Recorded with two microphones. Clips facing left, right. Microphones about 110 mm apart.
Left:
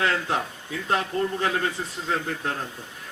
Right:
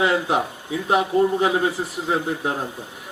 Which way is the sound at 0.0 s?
15° right (ahead or behind).